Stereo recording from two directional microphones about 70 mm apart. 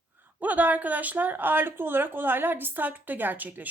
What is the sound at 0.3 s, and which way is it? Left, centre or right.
A woman's voice, right.